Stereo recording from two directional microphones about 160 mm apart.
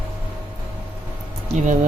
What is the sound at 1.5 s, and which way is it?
Speech, 50° right (ahead or behind).